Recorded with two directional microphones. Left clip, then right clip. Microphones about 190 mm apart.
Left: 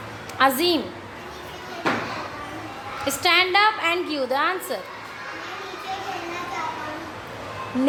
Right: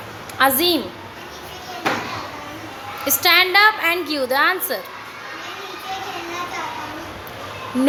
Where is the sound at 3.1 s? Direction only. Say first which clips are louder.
Right 4 dB; 5° right (ahead or behind).